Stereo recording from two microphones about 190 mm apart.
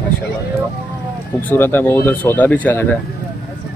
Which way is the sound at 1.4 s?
10° left (ahead or behind).